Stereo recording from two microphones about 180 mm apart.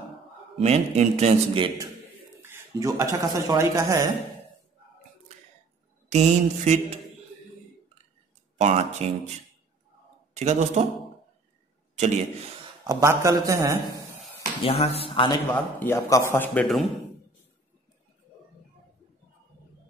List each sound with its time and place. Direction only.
0.6 s a man's voice: 35° right (ahead or behind)
2.4 s a man's voice: 15° right (ahead or behind)
6.0 s a man's voice: 40° right (ahead or behind)
8.5 s a man's voice: 35° right (ahead or behind)
10.3 s a man's voice: 35° right (ahead or behind)
12.8 s a man's voice: 15° right (ahead or behind)
14.6 s a man's voice: 35° left (ahead or behind)
15.5 s a man's voice: 10° left (ahead or behind)
16.6 s a man's voice: centre (ahead or behind)